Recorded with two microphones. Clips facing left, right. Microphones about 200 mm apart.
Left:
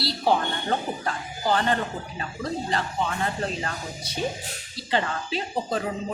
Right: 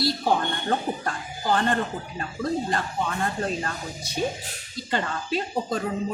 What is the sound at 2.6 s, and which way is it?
Speech, 50° right (ahead or behind).